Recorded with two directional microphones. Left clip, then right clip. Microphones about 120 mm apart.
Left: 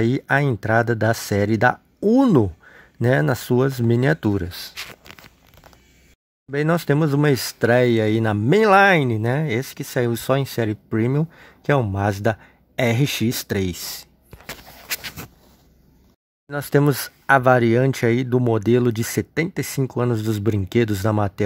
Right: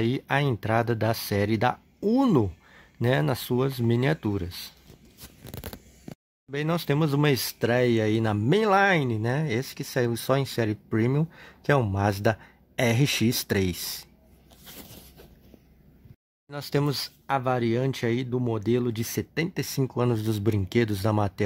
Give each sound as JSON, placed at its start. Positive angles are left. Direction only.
{"t": 0.0, "sound": "speech", "side_deg": 35}
{"t": 6.5, "sound": "speech", "side_deg": 35}
{"t": 16.4, "sound": "speech", "side_deg": 40}
{"t": 19.8, "sound": "speech", "side_deg": 15}